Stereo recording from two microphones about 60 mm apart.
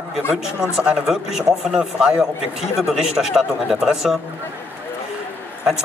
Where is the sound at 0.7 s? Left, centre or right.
Centre.